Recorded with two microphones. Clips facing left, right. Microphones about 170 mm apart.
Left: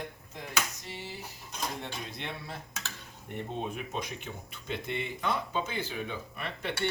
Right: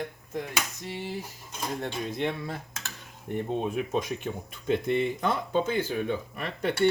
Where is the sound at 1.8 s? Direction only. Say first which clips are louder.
Right 10 dB; 50° right (ahead or behind).